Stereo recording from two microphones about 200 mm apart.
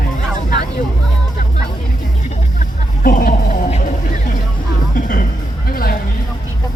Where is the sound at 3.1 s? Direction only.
45° left (ahead or behind).